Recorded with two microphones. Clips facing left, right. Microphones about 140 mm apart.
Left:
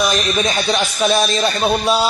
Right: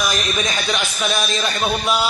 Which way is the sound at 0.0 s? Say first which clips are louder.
Left 5 dB; 30° left (ahead or behind).